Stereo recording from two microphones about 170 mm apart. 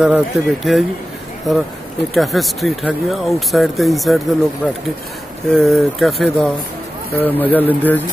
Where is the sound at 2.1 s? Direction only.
Centre (ahead or behind).